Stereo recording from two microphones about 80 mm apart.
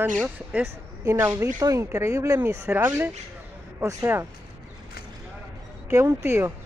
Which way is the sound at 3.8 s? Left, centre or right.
Right.